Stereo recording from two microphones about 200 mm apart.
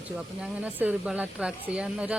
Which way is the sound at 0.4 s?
5° right (ahead or behind).